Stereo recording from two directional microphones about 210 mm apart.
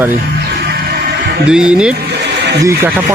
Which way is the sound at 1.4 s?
5° right (ahead or behind).